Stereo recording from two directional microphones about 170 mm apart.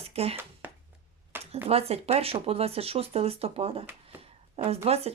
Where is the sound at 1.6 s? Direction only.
35° right (ahead or behind).